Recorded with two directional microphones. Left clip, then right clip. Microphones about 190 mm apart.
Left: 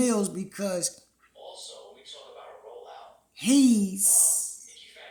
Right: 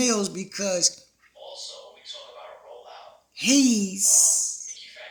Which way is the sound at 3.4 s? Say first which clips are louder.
Right 1 dB; 20° left (ahead or behind).